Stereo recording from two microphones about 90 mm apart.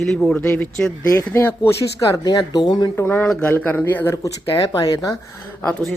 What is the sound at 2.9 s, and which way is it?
Speech, 25° left (ahead or behind).